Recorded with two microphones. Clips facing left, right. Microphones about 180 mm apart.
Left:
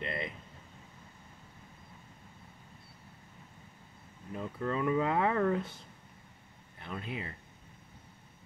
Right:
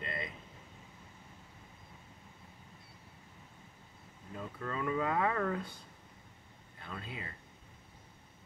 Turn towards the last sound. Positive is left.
turn(degrees=20)  # may be behind; listen again after turning